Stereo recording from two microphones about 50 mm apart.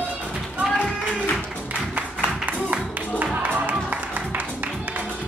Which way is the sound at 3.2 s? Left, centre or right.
Right.